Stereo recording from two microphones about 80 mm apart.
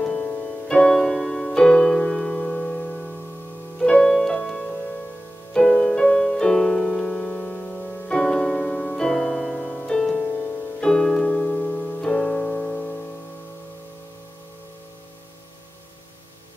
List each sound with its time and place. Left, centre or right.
0.0 s music: centre
10.8 s piano: centre